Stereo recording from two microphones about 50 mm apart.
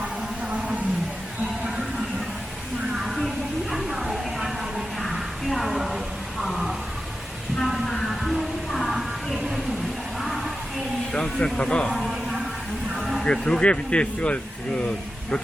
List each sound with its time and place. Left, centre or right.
3.0 s a sound: centre
7.6 s music: centre
10.2 s music: centre
11.1 s speech: centre
11.9 s a sound: centre
13.0 s music: centre
13.2 s speech: centre